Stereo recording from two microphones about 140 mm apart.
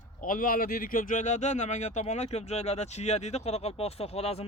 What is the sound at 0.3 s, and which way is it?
Speech, 85° left.